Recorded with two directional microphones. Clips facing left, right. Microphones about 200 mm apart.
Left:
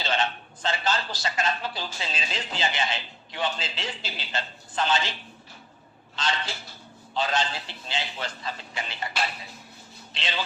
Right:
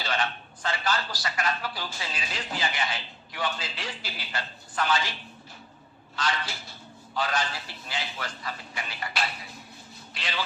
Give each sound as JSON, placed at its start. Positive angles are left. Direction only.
{"t": 0.0, "sound": "a man's voice", "side_deg": 25}
{"t": 6.2, "sound": "a man's voice", "side_deg": 25}
{"t": 10.2, "sound": "a man's voice", "side_deg": 25}